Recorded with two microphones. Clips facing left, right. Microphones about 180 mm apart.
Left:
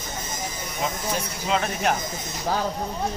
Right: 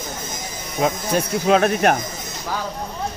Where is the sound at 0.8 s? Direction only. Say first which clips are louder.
Right 8 dB; 65° right (ahead or behind).